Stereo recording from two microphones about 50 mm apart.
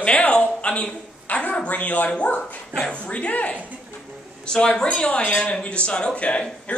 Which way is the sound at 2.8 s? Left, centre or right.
Left.